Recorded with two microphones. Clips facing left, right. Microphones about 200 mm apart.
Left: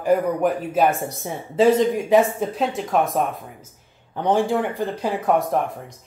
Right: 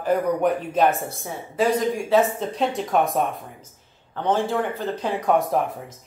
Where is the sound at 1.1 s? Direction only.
25° left (ahead or behind).